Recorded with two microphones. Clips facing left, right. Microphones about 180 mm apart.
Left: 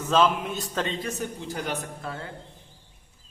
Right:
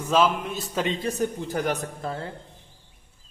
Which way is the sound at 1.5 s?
45° right (ahead or behind).